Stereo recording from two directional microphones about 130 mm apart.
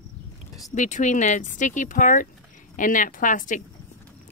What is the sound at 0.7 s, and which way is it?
A woman's voice, 70° left (ahead or behind).